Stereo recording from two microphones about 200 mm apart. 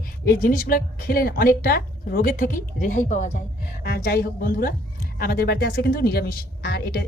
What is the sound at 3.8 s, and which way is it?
A woman's voice, 50° left (ahead or behind).